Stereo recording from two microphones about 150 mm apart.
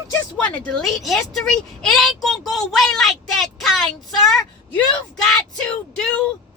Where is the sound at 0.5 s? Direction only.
5° left (ahead or behind).